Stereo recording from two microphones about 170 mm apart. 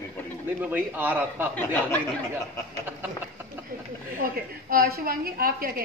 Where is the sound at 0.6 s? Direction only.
10° right (ahead or behind).